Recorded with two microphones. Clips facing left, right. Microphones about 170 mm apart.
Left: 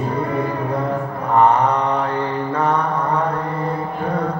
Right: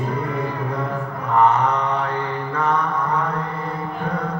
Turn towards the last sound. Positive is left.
turn(degrees=35)  # may be behind; listen again after turning